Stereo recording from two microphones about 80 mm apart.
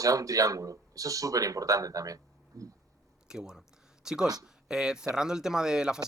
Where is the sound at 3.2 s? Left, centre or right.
Centre.